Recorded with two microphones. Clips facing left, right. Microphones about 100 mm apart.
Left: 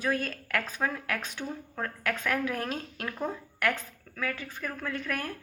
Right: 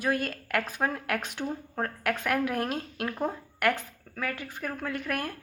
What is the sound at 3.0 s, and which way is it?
Speech, 20° right (ahead or behind).